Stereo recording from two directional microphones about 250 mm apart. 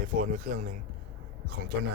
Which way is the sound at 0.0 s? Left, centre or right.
Right.